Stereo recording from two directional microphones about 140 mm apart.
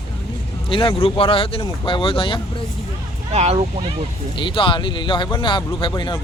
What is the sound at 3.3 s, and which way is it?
Speech, 50° right (ahead or behind).